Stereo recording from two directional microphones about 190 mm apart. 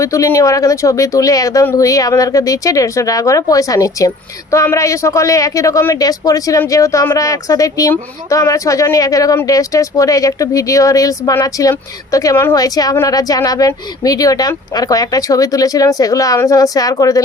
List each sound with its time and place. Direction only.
0.0 s speech: 15° left (ahead or behind)